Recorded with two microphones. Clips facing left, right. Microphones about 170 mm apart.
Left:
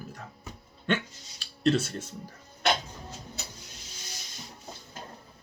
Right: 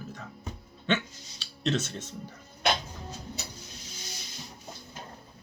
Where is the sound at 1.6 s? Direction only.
10° left (ahead or behind).